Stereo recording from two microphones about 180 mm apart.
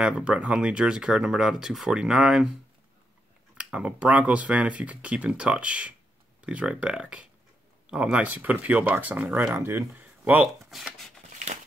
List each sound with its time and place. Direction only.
0.0 s speech: 5° right (ahead or behind)
3.5 s speech: 5° right (ahead or behind)
11.3 s a sound: 40° right (ahead or behind)